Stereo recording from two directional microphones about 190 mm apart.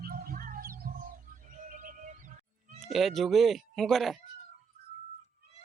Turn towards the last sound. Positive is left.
turn(degrees=0)  # may be behind; listen again after turning